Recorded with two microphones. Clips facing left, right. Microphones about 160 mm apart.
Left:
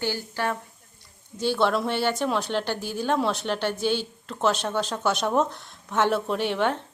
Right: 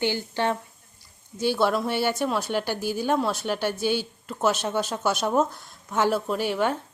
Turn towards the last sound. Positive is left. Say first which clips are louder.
# even
turn(degrees=-5)  # may be behind; listen again after turning